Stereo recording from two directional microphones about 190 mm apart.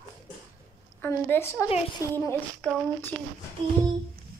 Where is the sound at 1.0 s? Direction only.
10° left (ahead or behind).